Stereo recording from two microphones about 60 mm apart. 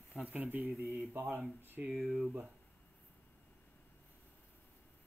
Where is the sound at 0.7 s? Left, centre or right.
Right.